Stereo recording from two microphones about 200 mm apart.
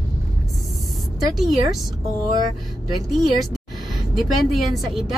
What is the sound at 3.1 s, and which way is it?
Speech, centre (ahead or behind).